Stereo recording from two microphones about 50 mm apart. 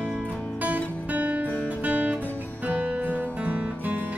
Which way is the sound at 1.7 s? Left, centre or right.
Right.